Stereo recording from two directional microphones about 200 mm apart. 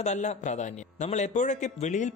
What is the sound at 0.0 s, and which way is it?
A man's voice, 35° left (ahead or behind).